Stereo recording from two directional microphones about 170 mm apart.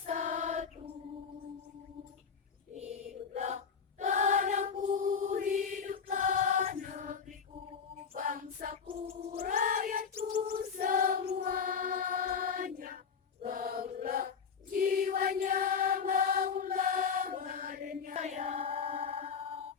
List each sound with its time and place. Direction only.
0.0 s a sound: 45° right (ahead or behind)
2.7 s chant: 40° right (ahead or behind)
4.0 s choir: 45° right (ahead or behind)
4.9 s chant: 50° right (ahead or behind)
8.1 s female singing: 55° right (ahead or behind)
8.9 s gargling: 35° right (ahead or behind)
9.4 s a sound: 50° right (ahead or behind)
10.8 s choir: 55° right (ahead or behind)
13.4 s chant: 55° right (ahead or behind)
14.8 s mantra: 55° right (ahead or behind); by 19.3 s 35° right (ahead or behind)